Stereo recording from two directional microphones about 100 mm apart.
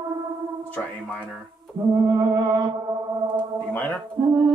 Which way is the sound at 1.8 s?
40° right (ahead or behind).